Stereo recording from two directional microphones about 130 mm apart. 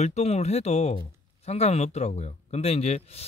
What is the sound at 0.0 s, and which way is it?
Speech, 55° left (ahead or behind).